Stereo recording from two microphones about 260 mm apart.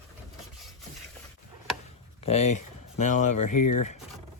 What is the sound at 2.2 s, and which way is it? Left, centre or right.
Speech, left.